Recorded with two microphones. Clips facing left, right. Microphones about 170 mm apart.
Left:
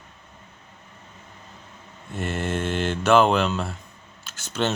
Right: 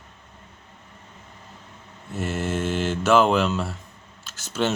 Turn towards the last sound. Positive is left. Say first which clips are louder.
# right 1 dB
turn(degrees=-5)  # may be behind; listen again after turning